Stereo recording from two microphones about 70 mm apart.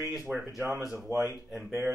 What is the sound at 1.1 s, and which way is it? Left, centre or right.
Speech, right.